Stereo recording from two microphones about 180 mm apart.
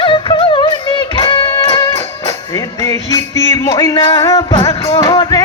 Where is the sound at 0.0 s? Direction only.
30° left (ahead or behind).